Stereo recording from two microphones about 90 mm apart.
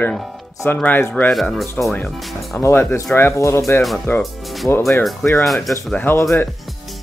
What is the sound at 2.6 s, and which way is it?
Speech, 25° left (ahead or behind).